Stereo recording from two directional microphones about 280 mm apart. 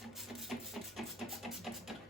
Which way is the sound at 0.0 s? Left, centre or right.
Centre.